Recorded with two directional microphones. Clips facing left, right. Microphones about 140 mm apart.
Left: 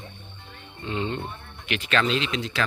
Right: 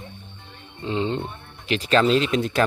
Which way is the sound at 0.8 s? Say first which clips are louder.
Right 4 dB; 25° right (ahead or behind).